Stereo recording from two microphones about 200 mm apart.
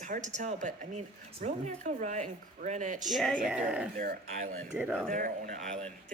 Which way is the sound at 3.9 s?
45° right (ahead or behind).